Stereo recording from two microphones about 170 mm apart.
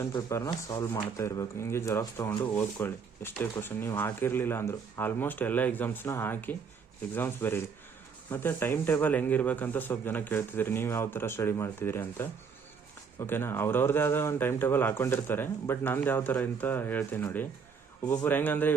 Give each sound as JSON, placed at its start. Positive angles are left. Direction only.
{"t": 0.0, "sound": "speech", "side_deg": 15}